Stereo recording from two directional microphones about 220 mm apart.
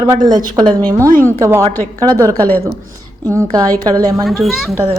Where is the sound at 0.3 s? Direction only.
20° right (ahead or behind).